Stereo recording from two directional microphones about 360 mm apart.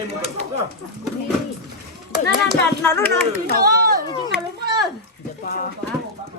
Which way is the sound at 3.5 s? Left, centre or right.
Right.